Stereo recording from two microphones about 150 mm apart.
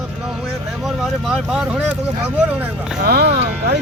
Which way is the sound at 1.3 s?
5° right (ahead or behind).